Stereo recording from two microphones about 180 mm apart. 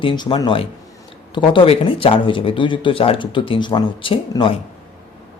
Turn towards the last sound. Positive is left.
turn(degrees=30)  # may be behind; listen again after turning